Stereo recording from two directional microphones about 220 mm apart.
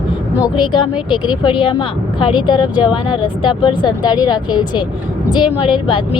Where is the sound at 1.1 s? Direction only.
20° left (ahead or behind).